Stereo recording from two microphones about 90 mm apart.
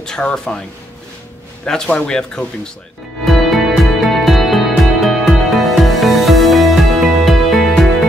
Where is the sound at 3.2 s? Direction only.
Centre (ahead or behind).